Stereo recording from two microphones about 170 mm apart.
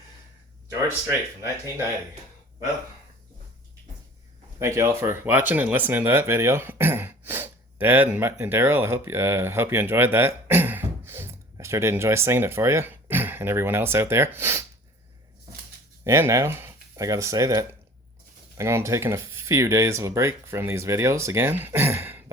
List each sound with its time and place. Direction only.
0.9 s speech: 15° right (ahead or behind)
4.6 s speech: 15° right (ahead or behind)
16.0 s speech: 15° right (ahead or behind)